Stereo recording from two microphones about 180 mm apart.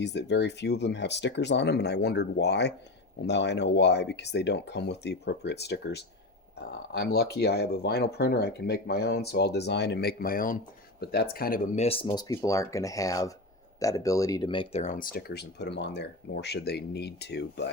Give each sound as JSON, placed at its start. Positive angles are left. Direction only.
{"t": 0.0, "sound": "speech", "side_deg": 70}
{"t": 12.3, "sound": "speech", "side_deg": 15}